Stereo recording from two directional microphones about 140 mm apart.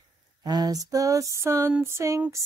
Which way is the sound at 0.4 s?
30° right (ahead or behind).